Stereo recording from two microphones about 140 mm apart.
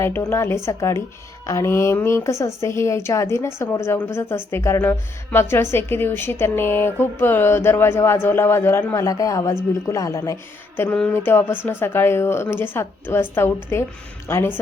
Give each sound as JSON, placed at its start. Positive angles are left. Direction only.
{"t": 0.2, "sound": "a woman's voice", "side_deg": 20}
{"t": 10.8, "sound": "speech", "side_deg": 5}
{"t": 11.3, "sound": "speech", "side_deg": 15}